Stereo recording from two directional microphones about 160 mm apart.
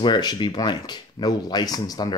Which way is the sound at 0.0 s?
25° left (ahead or behind).